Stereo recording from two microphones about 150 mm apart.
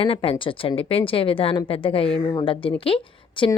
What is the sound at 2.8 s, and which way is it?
Speech, 35° left (ahead or behind).